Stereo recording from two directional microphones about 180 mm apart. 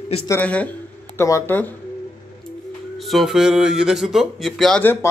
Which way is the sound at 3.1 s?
Centre (ahead or behind).